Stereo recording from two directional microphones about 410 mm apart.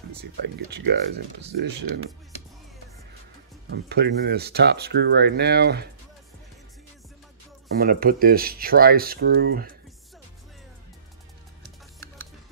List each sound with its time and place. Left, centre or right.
0.7 s speech: right
3.7 s speech: right
7.7 s speech: right